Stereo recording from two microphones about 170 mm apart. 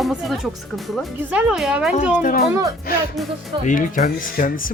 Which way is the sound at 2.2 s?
55° left (ahead or behind).